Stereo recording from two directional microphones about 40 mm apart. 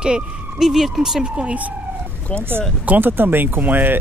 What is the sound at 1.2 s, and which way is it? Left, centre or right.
Speech, right.